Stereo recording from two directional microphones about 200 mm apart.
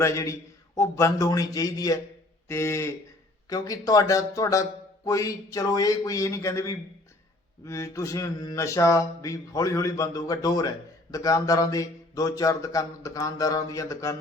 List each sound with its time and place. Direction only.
0.0 s speech: 15° left (ahead or behind)